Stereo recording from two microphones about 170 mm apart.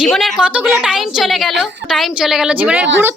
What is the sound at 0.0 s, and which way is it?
A woman's voice, centre (ahead or behind).